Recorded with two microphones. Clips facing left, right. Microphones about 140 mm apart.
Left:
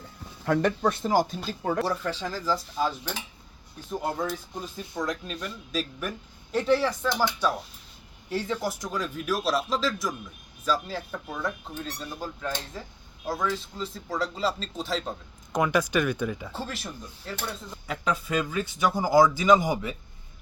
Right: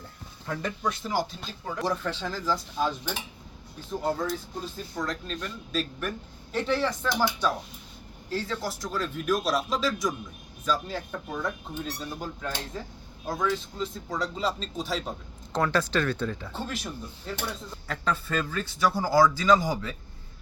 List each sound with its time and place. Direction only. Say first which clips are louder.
0.4 s speech: left 7 dB; 65° left (ahead or behind); by 1.4 s 45° left (ahead or behind)
1.8 s speech: left 1 dB; 10° left (ahead or behind)
8.3 s speech: left 2 dB; 20° left (ahead or behind); by 15.1 s centre (ahead or behind)
15.5 s speech: left 2 dB; 15° left (ahead or behind)
17.8 s speech: left 1 dB; 15° left (ahead or behind)